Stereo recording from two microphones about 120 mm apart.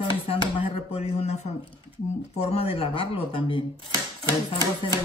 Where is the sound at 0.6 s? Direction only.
60° left (ahead or behind).